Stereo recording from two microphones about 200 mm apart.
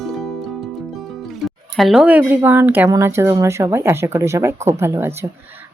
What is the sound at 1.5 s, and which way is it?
Speech, centre (ahead or behind).